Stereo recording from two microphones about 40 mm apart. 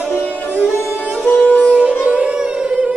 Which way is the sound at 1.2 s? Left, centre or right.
Left.